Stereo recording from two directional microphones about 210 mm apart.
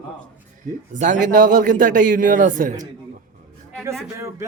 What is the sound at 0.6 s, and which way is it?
A man's voice, 35° right (ahead or behind).